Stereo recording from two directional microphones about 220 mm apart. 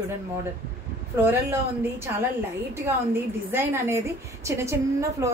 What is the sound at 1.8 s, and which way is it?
A woman's voice, 10° right (ahead or behind).